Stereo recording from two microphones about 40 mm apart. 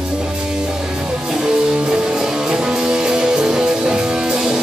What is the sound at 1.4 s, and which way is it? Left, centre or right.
Music, centre.